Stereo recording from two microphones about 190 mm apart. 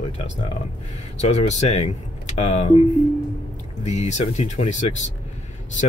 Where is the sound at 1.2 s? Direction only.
35° left (ahead or behind).